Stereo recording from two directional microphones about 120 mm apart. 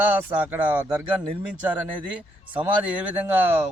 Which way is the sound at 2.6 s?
10° right (ahead or behind).